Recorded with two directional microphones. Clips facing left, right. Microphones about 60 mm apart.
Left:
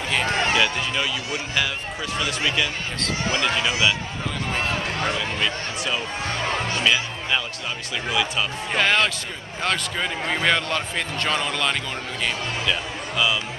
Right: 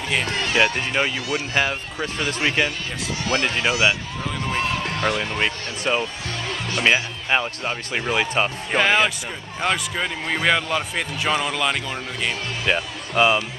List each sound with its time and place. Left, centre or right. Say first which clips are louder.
0.2 s run: left 3 dB; left
0.6 s speech: right 3 dB; right
4.5 s speech: right 1 dB; left
5.1 s speech: right 1 dB; right
6.4 s music: left 2 dB; left
6.8 s speech: right 6 dB; right
8.7 s speech: right 2 dB; centre
12.6 s speech: right 6 dB; right